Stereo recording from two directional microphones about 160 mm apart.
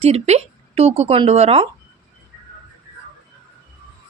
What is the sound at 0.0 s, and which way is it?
Speech, 40° right (ahead or behind).